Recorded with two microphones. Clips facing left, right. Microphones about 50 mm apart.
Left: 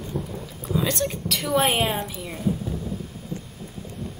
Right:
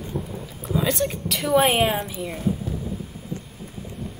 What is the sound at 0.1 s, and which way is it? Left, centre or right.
Speech, centre.